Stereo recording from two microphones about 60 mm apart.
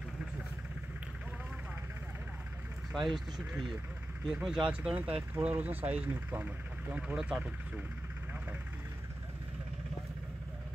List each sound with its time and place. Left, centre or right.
2.9 s speech: centre
4.9 s speech: right